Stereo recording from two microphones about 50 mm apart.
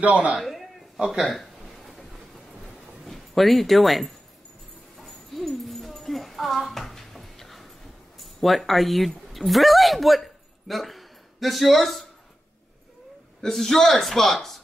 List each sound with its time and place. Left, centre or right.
0.0 s a man's voice: right
0.4 s a sound: centre
0.9 s speech: centre
1.8 s train: centre
3.1 s speech: centre
4.9 s a sound: centre
8.2 s speech: centre
13.4 s speech: centre